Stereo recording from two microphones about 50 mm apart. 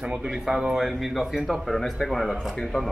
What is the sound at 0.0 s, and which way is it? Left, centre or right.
Speech, centre.